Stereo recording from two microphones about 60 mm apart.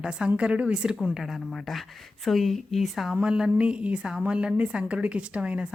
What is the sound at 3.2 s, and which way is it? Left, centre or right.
A woman's voice, centre.